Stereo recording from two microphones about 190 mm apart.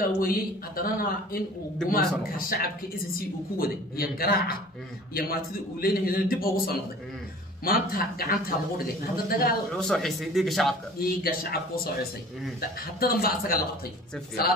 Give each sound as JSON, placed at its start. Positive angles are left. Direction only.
{"t": 0.0, "sound": "a man's voice", "side_deg": 50}
{"t": 9.8, "sound": "speech", "side_deg": 0}
{"t": 11.0, "sound": "a man's voice", "side_deg": 50}